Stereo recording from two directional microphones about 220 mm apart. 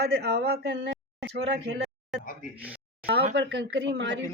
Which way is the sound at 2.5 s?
5° right (ahead or behind).